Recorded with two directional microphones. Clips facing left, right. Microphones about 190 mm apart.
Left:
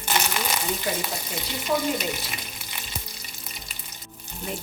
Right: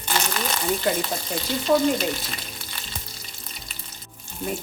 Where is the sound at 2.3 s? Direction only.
15° left (ahead or behind).